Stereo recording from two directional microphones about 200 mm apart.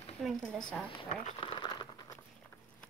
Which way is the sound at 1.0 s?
30° left (ahead or behind).